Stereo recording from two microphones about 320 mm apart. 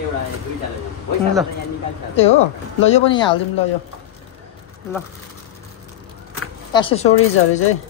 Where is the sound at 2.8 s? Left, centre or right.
Centre.